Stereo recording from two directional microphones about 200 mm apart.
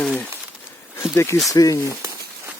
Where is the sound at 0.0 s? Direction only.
5° left (ahead or behind).